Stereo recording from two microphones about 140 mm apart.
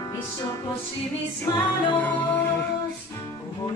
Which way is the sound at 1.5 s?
30° left (ahead or behind).